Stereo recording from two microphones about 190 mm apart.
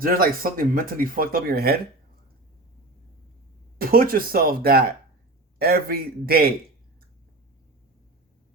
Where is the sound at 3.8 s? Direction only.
50° right (ahead or behind).